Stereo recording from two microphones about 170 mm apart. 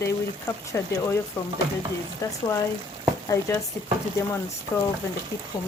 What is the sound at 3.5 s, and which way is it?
Speech, 15° left (ahead or behind).